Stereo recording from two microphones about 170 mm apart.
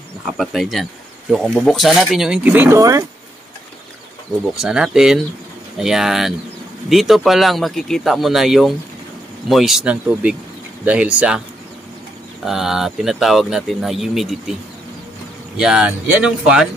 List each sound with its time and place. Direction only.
0.3 s speech: centre (ahead or behind); by 3.1 s 20° right (ahead or behind)
4.6 s speech: 5° right (ahead or behind)
12.4 s speech: centre (ahead or behind)
15.5 s speech: 5° right (ahead or behind)